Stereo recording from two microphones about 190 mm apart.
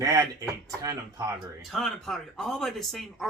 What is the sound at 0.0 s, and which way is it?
Speech, 20° right (ahead or behind).